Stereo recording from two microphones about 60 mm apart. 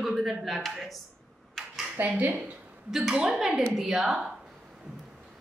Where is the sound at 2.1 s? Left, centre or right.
Right.